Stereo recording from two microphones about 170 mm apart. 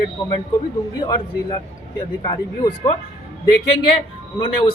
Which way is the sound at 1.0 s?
25° left (ahead or behind).